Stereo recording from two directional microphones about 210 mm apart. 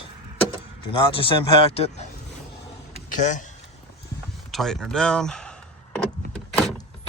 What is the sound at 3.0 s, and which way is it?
Speech, 35° left (ahead or behind).